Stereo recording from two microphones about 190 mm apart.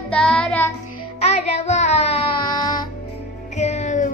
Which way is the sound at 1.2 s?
35° left (ahead or behind).